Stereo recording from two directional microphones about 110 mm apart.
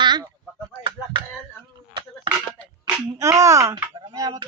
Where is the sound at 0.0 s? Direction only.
40° right (ahead or behind).